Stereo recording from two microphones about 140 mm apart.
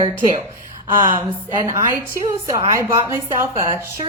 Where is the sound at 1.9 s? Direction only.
20° right (ahead or behind).